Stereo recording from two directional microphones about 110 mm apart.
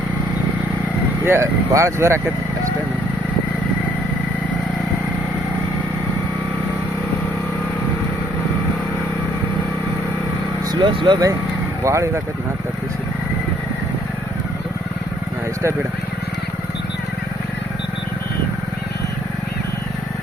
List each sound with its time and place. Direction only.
1.2 s speech: 25° right (ahead or behind)
10.7 s speech: 45° right (ahead or behind)
11.8 s speech: 25° right (ahead or behind)